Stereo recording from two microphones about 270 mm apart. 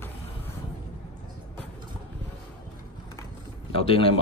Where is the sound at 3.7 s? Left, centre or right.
Left.